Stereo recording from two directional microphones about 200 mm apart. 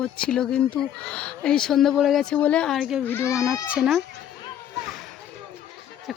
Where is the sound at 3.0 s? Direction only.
10° left (ahead or behind).